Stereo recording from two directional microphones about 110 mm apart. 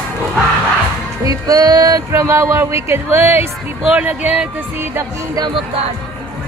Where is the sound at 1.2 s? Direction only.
35° right (ahead or behind).